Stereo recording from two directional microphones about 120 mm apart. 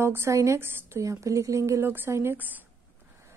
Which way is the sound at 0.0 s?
20° right (ahead or behind).